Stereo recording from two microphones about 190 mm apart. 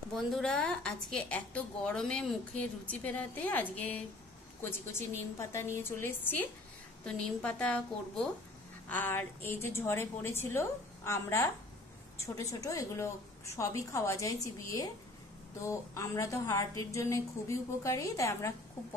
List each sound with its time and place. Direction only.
0.1 s a woman's voice: 5° left (ahead or behind)